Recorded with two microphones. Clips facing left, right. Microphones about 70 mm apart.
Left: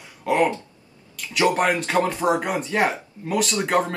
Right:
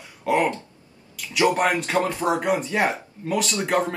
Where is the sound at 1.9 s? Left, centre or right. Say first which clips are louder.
Left 3 dB; centre.